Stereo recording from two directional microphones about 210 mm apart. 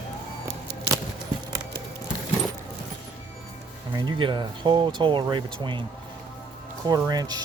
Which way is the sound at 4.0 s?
20° right (ahead or behind).